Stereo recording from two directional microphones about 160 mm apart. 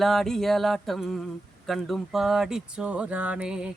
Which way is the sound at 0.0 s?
Centre (ahead or behind).